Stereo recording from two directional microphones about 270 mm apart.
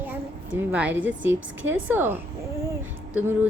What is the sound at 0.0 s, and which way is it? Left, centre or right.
A woman's voice, centre.